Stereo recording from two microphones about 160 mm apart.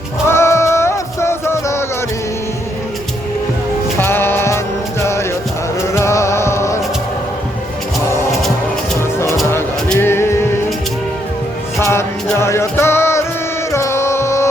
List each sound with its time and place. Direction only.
0.3 s music: 15° left (ahead or behind)
3.9 s music: 15° left (ahead or behind)
9.9 s music: 15° left (ahead or behind)
11.8 s music: 15° left (ahead or behind)